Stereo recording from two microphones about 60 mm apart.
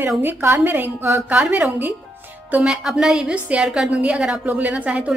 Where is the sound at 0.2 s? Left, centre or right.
Right.